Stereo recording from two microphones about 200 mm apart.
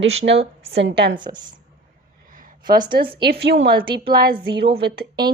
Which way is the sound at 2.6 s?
20° right (ahead or behind).